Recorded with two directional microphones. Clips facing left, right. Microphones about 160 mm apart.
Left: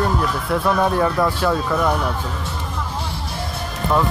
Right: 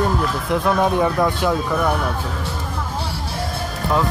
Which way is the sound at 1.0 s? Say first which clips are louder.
Even; 15° right (ahead or behind).